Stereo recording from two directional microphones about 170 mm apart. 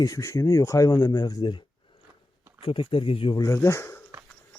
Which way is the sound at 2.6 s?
30° left (ahead or behind).